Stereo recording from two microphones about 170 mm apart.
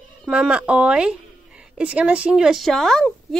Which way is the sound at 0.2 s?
5° right (ahead or behind).